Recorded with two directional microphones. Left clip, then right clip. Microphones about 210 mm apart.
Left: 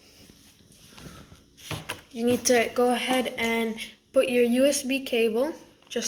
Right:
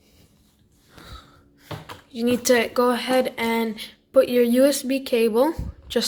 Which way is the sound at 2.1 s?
40° right (ahead or behind).